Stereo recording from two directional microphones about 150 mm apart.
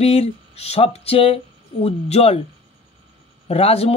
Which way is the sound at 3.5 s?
40° left (ahead or behind).